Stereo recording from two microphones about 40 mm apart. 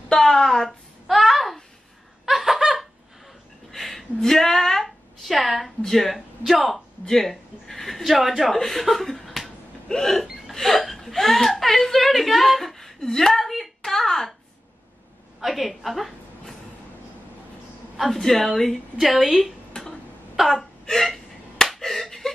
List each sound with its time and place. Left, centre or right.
0.1 s a sound: centre
2.2 s laughter: centre
3.7 s a sound: centre
4.2 s a woman's voice: centre
7.1 s speech: centre
9.8 s hiccup: centre
10.5 s a woman's voice: centre
15.4 s a woman's voice: centre
17.9 s speech: centre
19.7 s a sound: centre
20.3 s wail: centre
20.8 s hiccup: centre
21.6 s slap: centre
22.2 s a sound: centre